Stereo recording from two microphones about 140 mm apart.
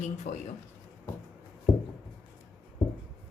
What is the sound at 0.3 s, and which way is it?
Speech, 60° left (ahead or behind).